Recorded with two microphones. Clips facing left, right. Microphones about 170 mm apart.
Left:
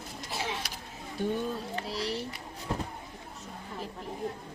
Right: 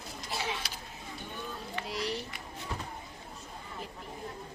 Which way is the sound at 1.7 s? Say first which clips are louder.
Left 2 dB; 35° left (ahead or behind).